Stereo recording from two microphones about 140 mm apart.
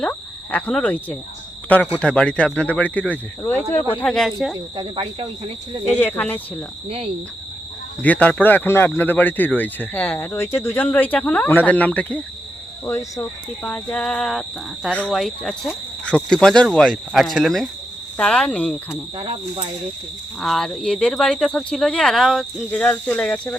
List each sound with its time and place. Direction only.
0.0 s speech: 10° left (ahead or behind)
4.8 s speech: 35° right (ahead or behind)
6.0 s speech: 15° left (ahead or behind)
6.8 s cricket: 45° right (ahead or behind)
8.0 s speech: 10° left (ahead or behind)
19.1 s speech: 40° right (ahead or behind)
20.4 s speech: centre (ahead or behind)